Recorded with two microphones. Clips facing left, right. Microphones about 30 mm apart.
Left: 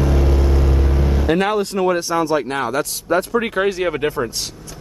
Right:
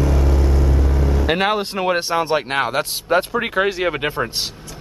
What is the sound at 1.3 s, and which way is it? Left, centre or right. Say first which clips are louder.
A man's voice: left 2 dB; right.